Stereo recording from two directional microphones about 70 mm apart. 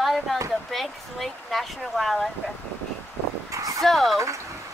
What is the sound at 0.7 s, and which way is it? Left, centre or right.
Speech, centre.